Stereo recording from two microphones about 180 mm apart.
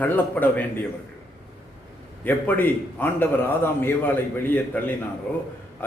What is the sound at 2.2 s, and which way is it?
A man's voice, 10° left (ahead or behind).